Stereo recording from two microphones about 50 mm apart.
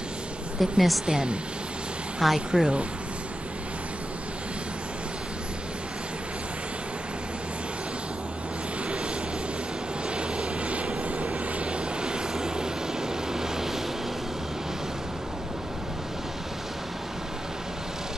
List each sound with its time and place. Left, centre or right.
0.6 s a woman's voice: centre
1.0 s speech: centre
2.1 s speech: centre
10.1 s vehicle: right